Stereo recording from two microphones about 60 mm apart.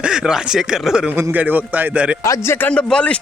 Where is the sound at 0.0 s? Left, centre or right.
Centre.